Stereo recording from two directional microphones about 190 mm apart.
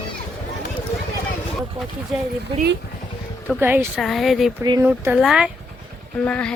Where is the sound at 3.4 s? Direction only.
10° right (ahead or behind).